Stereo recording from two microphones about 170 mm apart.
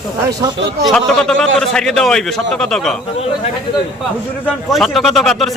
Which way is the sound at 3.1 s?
35° left (ahead or behind).